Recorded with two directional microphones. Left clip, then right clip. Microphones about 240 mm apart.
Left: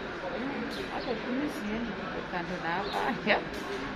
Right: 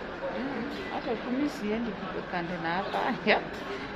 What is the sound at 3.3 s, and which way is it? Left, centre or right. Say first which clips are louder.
Speech: right 2 dB; right.